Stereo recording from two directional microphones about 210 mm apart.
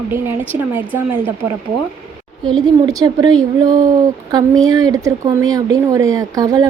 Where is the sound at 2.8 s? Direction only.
20° right (ahead or behind).